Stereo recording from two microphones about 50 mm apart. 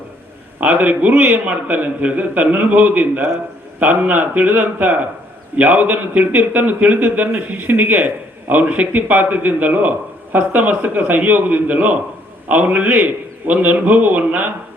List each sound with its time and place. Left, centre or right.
0.6 s speech: right